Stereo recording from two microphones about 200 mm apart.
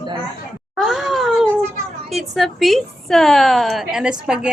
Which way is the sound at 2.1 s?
Centre (ahead or behind).